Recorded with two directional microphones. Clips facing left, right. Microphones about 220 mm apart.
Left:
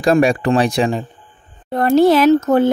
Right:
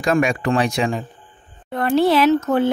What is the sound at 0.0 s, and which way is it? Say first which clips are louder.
Speech: left 5 dB; 35° left (ahead or behind).